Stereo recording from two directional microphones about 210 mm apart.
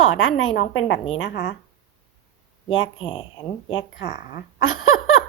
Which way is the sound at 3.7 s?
60° left (ahead or behind).